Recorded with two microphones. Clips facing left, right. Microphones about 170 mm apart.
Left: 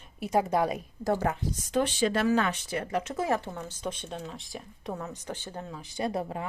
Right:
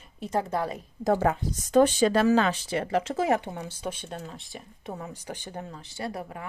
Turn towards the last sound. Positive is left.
turn(degrees=25)  # may be behind; listen again after turning